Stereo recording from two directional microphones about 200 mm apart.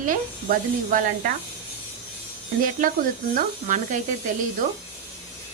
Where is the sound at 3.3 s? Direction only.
40° right (ahead or behind).